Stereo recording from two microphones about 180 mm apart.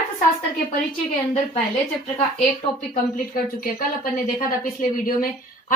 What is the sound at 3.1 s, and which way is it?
Speech, 55° left (ahead or behind).